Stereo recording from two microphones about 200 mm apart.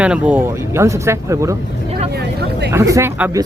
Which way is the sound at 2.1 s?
55° right (ahead or behind).